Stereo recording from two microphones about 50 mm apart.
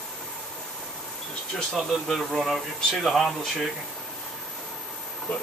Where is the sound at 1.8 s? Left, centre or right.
Centre.